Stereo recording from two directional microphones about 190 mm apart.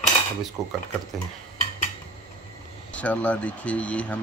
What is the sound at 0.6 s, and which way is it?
Stir, 15° right (ahead or behind).